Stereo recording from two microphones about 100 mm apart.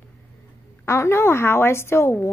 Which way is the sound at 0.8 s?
25° left (ahead or behind).